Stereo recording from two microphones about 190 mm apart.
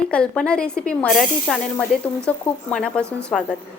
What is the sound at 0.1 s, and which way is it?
A woman's voice, 5° left (ahead or behind).